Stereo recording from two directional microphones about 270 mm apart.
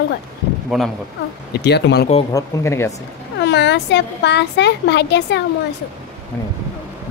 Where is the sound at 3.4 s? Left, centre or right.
Left.